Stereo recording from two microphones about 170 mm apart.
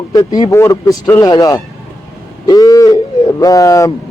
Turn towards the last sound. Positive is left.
turn(degrees=15)  # may be behind; listen again after turning